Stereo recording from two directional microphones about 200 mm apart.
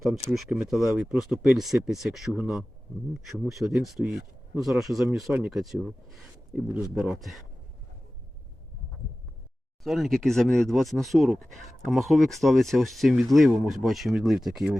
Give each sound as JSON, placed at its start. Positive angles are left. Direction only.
{"t": 0.0, "sound": "speech", "side_deg": 0}
{"t": 9.8, "sound": "speech", "side_deg": 0}